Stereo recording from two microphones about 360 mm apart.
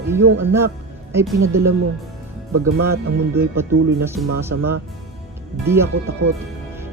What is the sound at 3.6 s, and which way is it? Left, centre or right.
Speech, centre.